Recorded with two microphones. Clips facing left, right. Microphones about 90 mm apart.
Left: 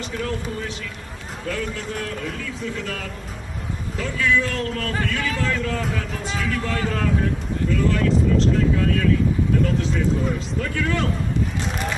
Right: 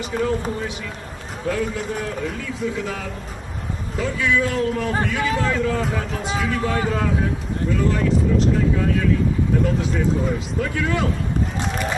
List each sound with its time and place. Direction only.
1.5 s a man's voice: 5° right (ahead or behind)
4.0 s a man's voice: 10° right (ahead or behind)
9.8 s a man's voice: 10° right (ahead or behind)